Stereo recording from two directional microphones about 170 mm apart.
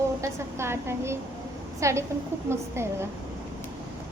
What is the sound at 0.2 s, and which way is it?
A woman's voice, 15° right (ahead or behind).